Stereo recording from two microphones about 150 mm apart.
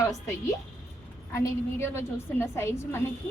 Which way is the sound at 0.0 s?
20° left (ahead or behind).